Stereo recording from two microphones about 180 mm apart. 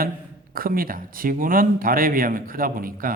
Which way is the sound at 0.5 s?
55° right (ahead or behind).